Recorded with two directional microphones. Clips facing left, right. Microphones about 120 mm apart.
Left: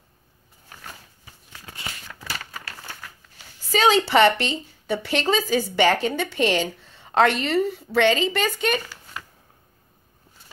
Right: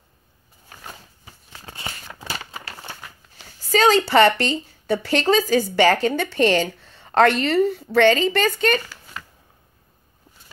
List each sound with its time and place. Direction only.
1.5 s crumpling: 30° right (ahead or behind)
3.7 s a sound: centre (ahead or behind)
4.1 s a woman's voice: centre (ahead or behind)